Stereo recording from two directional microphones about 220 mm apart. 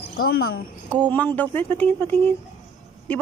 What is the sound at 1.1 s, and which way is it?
Speech, 5° left (ahead or behind).